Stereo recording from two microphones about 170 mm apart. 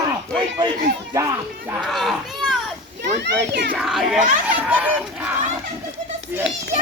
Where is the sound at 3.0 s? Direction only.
75° right (ahead or behind).